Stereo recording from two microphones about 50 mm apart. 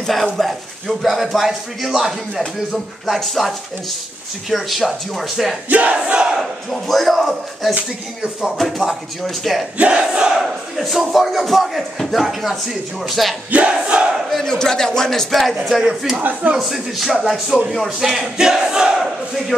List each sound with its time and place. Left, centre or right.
0.0 s speech: centre
5.7 s battle cry: right
6.7 s speech: centre
8.2 s battle cry: centre
8.5 s speech: centre
9.8 s battle cry: right
10.1 s battle cry: centre
10.4 s speech: centre
13.7 s battle cry: right
14.3 s a man's voice: centre
15.8 s battle cry: centre
16.2 s speech: right
16.5 s speech: centre
17.7 s battle cry: centre